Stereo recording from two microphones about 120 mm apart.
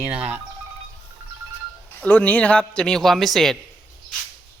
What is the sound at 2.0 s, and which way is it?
Speech, 10° left (ahead or behind).